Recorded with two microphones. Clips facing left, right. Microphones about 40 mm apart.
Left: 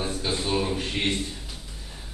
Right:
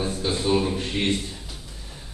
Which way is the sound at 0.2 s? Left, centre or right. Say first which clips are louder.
Right 5 dB; centre.